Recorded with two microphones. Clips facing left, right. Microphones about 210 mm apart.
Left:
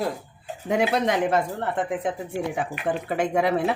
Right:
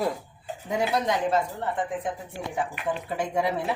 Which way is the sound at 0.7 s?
70° left (ahead or behind).